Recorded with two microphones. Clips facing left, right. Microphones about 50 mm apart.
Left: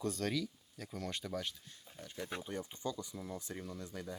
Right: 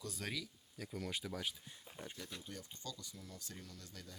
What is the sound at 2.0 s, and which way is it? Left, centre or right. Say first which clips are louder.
Speech: right 2 dB; right.